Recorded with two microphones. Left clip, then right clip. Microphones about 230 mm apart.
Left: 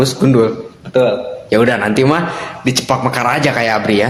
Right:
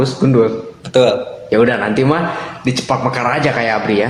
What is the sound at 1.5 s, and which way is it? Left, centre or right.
A man's voice, left.